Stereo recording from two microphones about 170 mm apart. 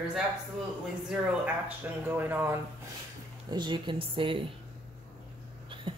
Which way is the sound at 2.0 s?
10° right (ahead or behind).